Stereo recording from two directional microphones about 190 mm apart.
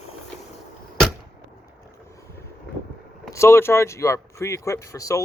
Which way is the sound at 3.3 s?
15° left (ahead or behind).